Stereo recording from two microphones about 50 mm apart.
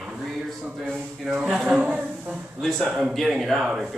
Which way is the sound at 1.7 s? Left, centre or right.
Right.